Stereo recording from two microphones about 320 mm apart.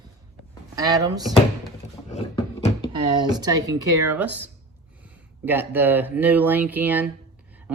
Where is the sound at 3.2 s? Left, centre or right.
Centre.